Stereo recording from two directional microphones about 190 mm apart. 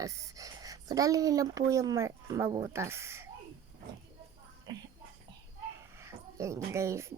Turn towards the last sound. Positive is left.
turn(degrees=-15)  # may be behind; listen again after turning